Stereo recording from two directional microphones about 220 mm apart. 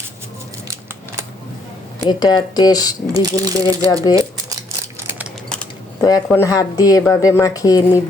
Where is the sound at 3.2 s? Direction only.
15° right (ahead or behind).